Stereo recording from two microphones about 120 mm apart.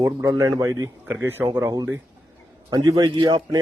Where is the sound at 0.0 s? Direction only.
25° right (ahead or behind).